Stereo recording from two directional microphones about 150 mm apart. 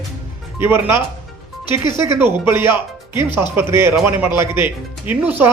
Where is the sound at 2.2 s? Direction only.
15° right (ahead or behind).